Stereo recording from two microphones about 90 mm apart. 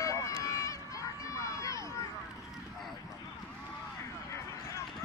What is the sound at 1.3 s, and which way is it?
Crowd, 35° left (ahead or behind).